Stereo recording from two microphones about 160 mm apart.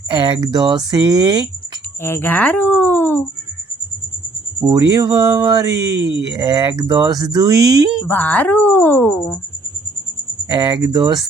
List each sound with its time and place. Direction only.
0.1 s speech: 30° right (ahead or behind)
2.0 s speech: 15° left (ahead or behind)
4.6 s speech: 25° right (ahead or behind)
8.0 s speech: 10° left (ahead or behind)
10.5 s speech: 30° right (ahead or behind)